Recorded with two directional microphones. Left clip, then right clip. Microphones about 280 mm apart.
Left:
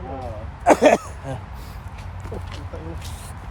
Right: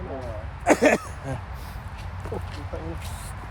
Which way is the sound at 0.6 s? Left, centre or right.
Centre.